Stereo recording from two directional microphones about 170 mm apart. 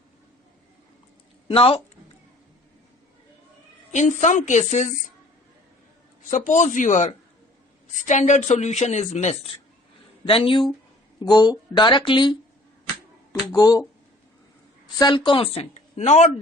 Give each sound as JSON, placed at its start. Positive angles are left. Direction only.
{"t": 1.5, "sound": "speech", "side_deg": 35}
{"t": 3.9, "sound": "speech", "side_deg": 45}
{"t": 6.3, "sound": "speech", "side_deg": 50}
{"t": 10.2, "sound": "speech", "side_deg": 30}
{"t": 13.5, "sound": "speech", "side_deg": 20}
{"t": 14.9, "sound": "speech", "side_deg": 25}